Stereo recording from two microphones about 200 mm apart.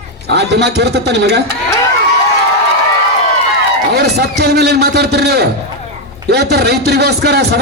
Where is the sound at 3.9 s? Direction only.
55° right (ahead or behind).